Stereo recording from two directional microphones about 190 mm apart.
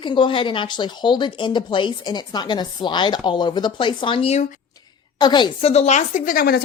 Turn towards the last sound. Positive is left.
turn(degrees=50)  # may be behind; listen again after turning